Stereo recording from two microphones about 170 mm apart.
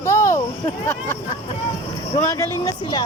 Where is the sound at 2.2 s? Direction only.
20° left (ahead or behind).